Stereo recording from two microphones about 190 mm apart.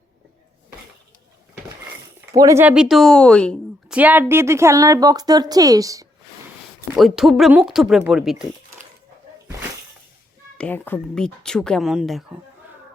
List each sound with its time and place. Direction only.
2.3 s a woman's voice: 15° right (ahead or behind); by 3.9 s 5° left (ahead or behind)
3.9 s speech: 10° right (ahead or behind)
6.9 s a woman's voice: centre (ahead or behind)
10.6 s a woman's voice: 10° left (ahead or behind)